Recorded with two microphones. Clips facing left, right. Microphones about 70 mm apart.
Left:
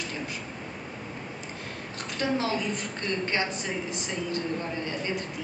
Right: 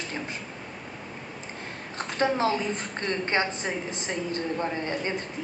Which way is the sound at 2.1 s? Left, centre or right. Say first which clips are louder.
Right 3 dB; right.